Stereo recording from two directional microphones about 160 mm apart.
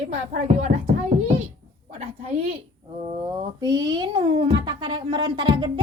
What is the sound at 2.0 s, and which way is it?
A woman's voice, 40° right (ahead or behind).